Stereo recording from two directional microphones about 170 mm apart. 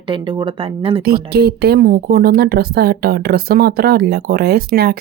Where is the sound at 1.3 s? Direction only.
70° right (ahead or behind).